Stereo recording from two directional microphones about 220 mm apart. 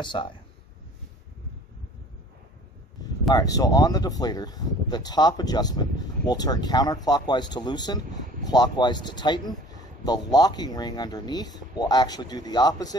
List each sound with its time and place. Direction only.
0.0 s speech: 20° left (ahead or behind)
3.3 s speech: 15° left (ahead or behind)